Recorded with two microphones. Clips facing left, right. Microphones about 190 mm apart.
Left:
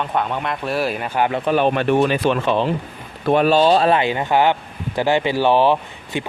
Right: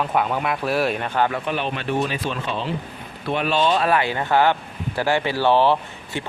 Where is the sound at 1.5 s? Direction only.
50° left (ahead or behind).